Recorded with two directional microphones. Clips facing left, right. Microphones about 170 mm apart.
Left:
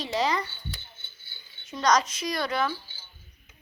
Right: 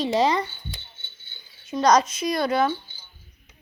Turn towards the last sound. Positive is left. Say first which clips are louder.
# right 6 dB
turn(degrees=-20)  # may be behind; listen again after turning